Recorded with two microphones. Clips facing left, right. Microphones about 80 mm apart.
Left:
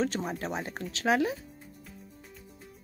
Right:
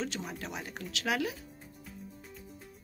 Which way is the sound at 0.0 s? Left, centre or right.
Left.